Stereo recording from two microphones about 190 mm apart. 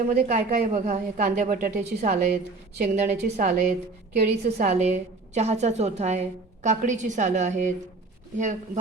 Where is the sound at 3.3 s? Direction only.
40° right (ahead or behind).